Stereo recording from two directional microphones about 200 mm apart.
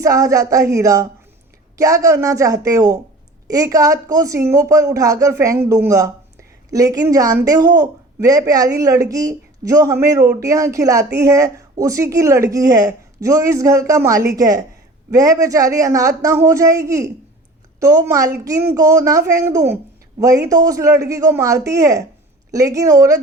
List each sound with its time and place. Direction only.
0.0 s speech: 15° right (ahead or behind)